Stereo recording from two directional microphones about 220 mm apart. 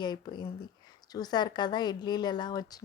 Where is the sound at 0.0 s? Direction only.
20° left (ahead or behind).